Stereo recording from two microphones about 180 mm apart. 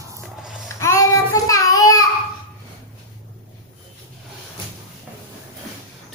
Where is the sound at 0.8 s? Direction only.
15° left (ahead or behind).